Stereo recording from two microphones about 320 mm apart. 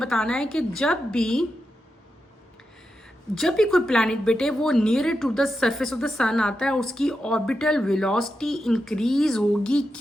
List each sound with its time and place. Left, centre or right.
0.0 s a woman's voice: centre
3.3 s a woman's voice: centre